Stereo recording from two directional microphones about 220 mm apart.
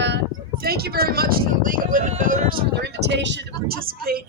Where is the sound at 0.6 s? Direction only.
45° right (ahead or behind).